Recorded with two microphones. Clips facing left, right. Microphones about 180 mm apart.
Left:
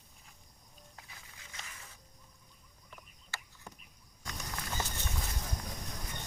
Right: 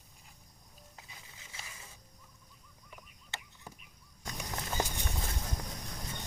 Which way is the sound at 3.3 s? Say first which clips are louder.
Right 1 dB; 20° right (ahead or behind).